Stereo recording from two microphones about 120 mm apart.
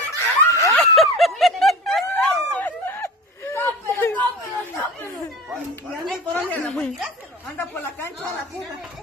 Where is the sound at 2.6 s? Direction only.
20° left (ahead or behind).